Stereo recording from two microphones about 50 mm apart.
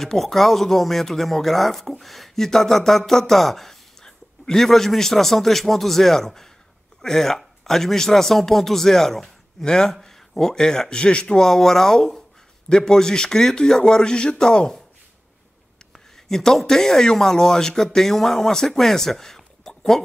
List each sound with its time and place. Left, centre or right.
0.0 s a man's voice: centre
15.9 s speech: centre